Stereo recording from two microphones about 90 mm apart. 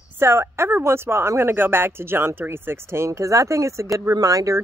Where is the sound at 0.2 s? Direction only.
30° right (ahead or behind).